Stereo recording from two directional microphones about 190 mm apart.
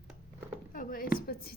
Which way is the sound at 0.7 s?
45° left (ahead or behind).